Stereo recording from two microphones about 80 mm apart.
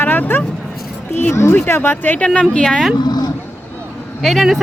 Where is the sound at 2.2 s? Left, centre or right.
Centre.